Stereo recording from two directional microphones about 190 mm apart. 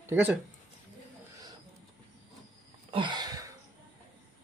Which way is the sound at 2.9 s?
25° right (ahead or behind).